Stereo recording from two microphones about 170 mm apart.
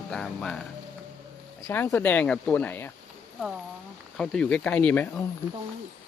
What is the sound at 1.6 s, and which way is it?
Speech, 15° left (ahead or behind).